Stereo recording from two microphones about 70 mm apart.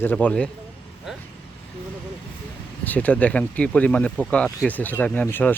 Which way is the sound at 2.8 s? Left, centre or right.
Left.